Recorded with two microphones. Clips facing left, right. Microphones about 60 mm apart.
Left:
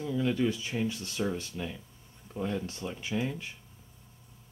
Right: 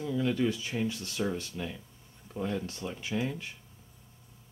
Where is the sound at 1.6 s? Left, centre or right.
Centre.